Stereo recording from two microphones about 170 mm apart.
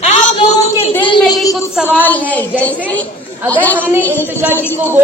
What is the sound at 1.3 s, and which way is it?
A woman's voice, 20° left (ahead or behind).